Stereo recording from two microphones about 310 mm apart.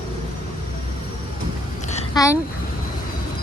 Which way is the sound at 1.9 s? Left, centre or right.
Left.